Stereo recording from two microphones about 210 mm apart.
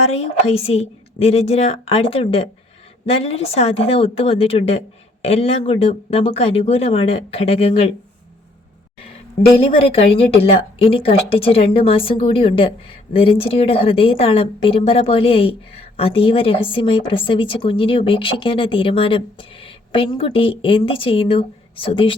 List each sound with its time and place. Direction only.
0.2 s a woman's voice: 30° left (ahead or behind)
9.0 s a woman's voice: 25° left (ahead or behind)